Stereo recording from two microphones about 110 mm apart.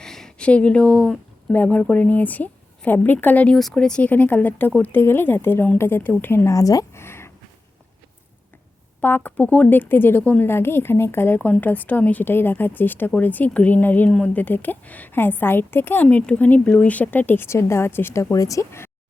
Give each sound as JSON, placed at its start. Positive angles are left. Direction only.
{"t": 0.0, "sound": "speech", "side_deg": 5}
{"t": 9.0, "sound": "a woman's voice", "side_deg": 15}